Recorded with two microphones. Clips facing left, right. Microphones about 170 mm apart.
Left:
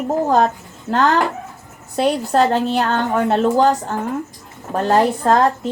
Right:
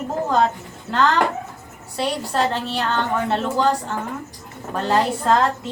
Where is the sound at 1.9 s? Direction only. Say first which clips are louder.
Left 6 dB; 45° left (ahead or behind).